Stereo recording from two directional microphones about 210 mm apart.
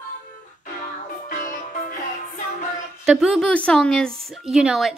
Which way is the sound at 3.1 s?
Centre (ahead or behind).